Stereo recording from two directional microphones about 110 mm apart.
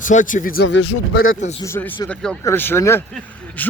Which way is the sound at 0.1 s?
90° left.